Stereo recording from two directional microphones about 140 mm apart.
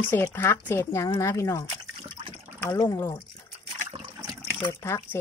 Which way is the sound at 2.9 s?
15° left (ahead or behind).